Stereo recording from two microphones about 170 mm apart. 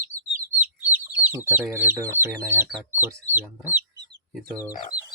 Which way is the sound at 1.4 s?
15° right (ahead or behind).